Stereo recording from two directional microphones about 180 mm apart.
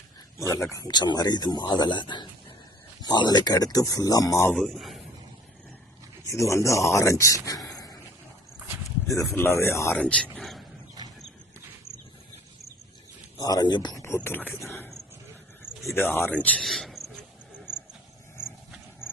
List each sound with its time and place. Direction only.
0.3 s speech: 15° left (ahead or behind)
4.5 s speech: centre (ahead or behind)
6.2 s speech: 15° left (ahead or behind)
9.1 s speech: 15° left (ahead or behind)
10.3 s a sound: centre (ahead or behind)
13.4 s speech: 20° left (ahead or behind)
15.7 s a sound: centre (ahead or behind)
16.0 s speech: 10° left (ahead or behind)